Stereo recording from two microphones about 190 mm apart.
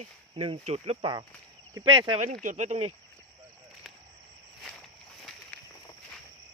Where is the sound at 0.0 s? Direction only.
30° right (ahead or behind).